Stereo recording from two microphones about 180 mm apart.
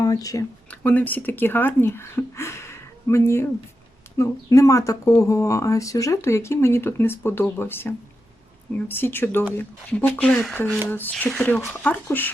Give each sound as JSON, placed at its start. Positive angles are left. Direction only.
{"t": 0.0, "sound": "speech", "side_deg": 20}
{"t": 0.7, "sound": "speech", "side_deg": 5}